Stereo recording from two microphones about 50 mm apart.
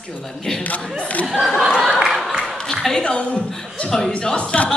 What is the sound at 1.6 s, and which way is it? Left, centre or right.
Choir, centre.